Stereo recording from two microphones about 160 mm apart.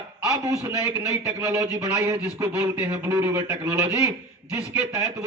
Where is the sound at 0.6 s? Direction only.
15° right (ahead or behind).